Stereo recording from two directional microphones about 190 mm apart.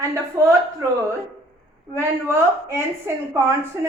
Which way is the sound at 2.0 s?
15° right (ahead or behind).